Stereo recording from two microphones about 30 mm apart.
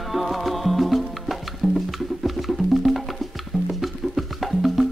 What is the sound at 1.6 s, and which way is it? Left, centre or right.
Music, centre.